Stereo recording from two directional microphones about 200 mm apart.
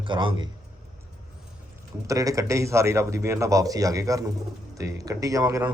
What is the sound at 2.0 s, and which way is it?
A man's voice, 15° right (ahead or behind).